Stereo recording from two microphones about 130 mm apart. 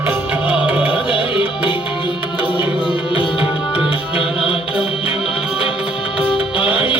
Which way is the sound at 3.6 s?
5° right (ahead or behind).